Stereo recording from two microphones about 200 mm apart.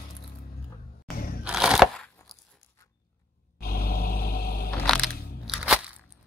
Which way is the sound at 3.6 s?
50° left (ahead or behind).